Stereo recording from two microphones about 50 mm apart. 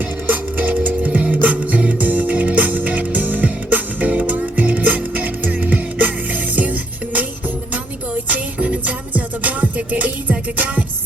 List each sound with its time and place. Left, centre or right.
0.3 s music: right
8.3 s music: right